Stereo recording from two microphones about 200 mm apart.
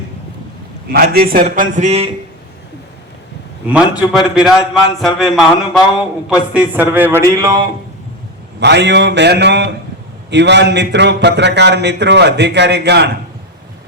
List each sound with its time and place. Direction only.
0.9 s a man's voice: 50° right (ahead or behind); by 2.0 s 35° right (ahead or behind)
3.7 s a man's voice: 5° right (ahead or behind)
8.6 s a man's voice: 60° right (ahead or behind)